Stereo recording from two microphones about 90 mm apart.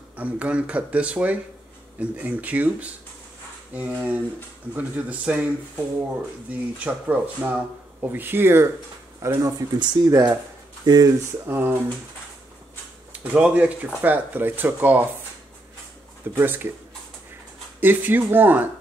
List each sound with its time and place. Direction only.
0.1 s speech: 15° right (ahead or behind)
6.5 s speech: 15° right (ahead or behind)
9.2 s speech: 35° right (ahead or behind)
9.8 s speech: 45° right (ahead or behind)
11.4 s speech: 25° right (ahead or behind)
13.1 s speech: 15° right (ahead or behind)
16.3 s speech: 25° right (ahead or behind)
17.7 s speech: 20° right (ahead or behind)